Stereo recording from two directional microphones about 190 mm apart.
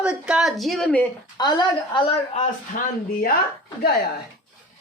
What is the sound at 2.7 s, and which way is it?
Speech, 45° left (ahead or behind).